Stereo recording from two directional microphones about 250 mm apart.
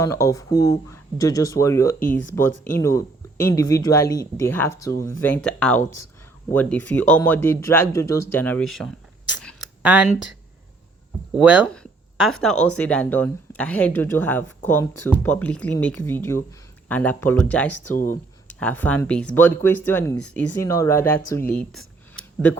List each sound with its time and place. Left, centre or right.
0.0 s speech: centre
11.3 s speech: centre
17.9 s speech: left
18.4 s speech: centre